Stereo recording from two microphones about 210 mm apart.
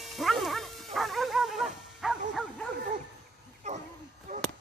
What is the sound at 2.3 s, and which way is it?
Bow-wow, centre (ahead or behind).